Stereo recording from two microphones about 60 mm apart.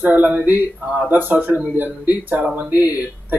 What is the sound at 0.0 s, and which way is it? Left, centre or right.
Speech, right.